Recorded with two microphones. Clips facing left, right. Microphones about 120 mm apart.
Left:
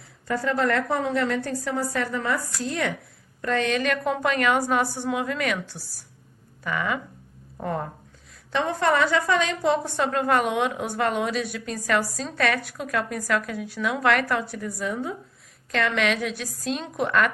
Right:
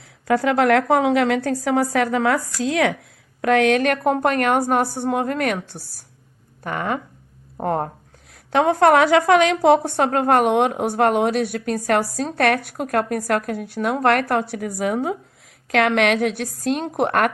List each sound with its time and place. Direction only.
0.3 s a woman's voice: 80° right
3.4 s a woman's voice: 70° right (ahead or behind); by 7.9 s 55° right (ahead or behind)
8.5 s a woman's voice: 70° right (ahead or behind)